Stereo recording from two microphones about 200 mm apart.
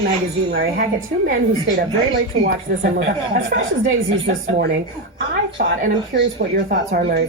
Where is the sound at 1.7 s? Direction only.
45° right (ahead or behind).